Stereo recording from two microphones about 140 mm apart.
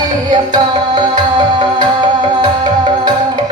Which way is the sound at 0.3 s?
30° right (ahead or behind).